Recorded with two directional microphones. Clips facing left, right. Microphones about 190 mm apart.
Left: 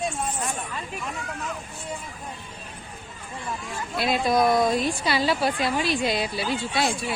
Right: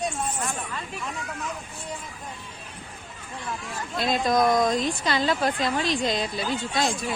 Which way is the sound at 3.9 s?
5° left (ahead or behind).